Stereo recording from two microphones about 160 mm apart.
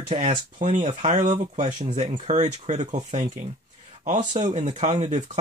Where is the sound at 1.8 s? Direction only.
35° right (ahead or behind).